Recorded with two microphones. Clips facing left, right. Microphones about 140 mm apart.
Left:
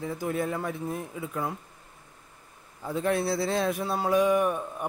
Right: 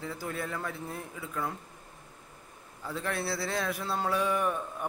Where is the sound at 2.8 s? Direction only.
20° left (ahead or behind).